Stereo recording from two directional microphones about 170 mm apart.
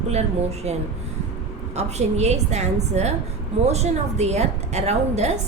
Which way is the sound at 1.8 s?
40° right (ahead or behind).